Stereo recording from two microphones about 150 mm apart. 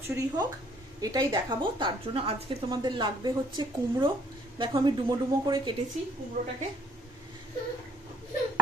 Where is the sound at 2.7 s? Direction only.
30° right (ahead or behind).